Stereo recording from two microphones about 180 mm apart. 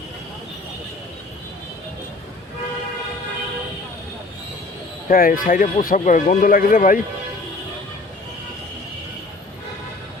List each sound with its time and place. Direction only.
5.0 s speech: 50° left (ahead or behind)